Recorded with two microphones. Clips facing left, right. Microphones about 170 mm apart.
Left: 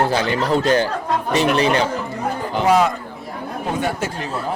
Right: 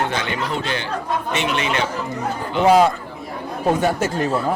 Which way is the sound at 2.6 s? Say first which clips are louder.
Right 2 dB; 30° right (ahead or behind).